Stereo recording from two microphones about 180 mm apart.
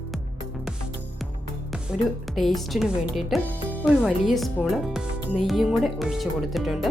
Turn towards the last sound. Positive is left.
turn(degrees=0)  # may be behind; listen again after turning